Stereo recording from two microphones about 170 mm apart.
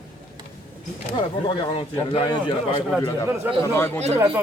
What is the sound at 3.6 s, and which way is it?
Speech, 15° left (ahead or behind).